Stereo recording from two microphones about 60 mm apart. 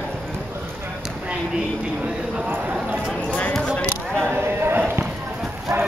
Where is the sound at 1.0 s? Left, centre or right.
Centre.